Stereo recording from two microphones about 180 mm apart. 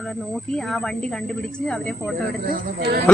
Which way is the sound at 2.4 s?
60° right (ahead or behind).